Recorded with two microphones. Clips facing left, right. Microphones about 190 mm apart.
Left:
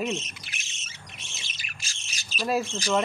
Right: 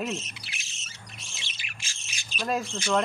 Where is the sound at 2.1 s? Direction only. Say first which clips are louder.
Left 1 dB; 40° left (ahead or behind).